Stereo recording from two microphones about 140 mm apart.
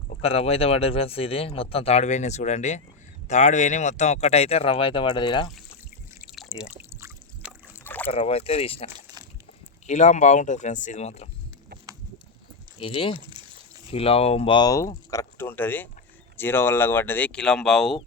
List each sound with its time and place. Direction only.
0.1 s speech: 45° left (ahead or behind)
6.2 s drip: centre (ahead or behind)
6.7 s pour: 20° right (ahead or behind)
7.9 s boat: 15° left (ahead or behind)
8.1 s speech: 45° left (ahead or behind)
9.8 s speech: 55° left (ahead or behind)
12.8 s speech: 40° left (ahead or behind)
14.7 s speech: 25° left (ahead or behind); by 18.0 s 5° left (ahead or behind)